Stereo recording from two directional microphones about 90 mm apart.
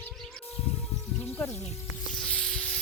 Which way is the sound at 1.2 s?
25° left (ahead or behind).